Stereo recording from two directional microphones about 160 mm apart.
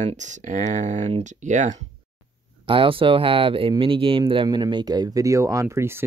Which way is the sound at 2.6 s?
35° right (ahead or behind).